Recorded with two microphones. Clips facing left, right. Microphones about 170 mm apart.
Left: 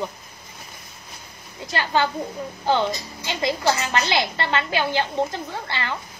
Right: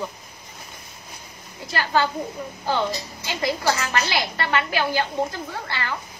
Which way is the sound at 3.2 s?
25° left (ahead or behind).